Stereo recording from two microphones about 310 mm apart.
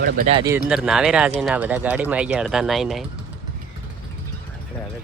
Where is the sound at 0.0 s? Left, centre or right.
Right.